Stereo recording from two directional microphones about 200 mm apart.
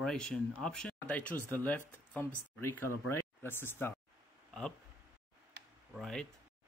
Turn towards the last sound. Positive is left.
turn(degrees=5)  # may be behind; listen again after turning